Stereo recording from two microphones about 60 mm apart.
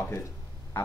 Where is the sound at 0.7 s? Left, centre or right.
Left.